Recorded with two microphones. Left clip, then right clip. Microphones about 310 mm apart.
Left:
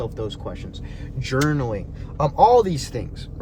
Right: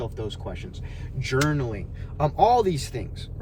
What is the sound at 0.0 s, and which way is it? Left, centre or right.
Speech, centre.